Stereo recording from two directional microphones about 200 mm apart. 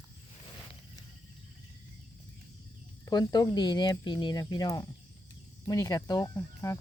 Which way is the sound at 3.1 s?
20° left (ahead or behind).